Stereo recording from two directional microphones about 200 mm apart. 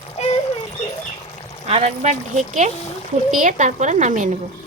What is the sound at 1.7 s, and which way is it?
Speech, 35° right (ahead or behind).